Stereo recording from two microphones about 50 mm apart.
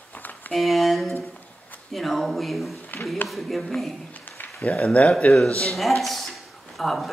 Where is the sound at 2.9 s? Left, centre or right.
Left.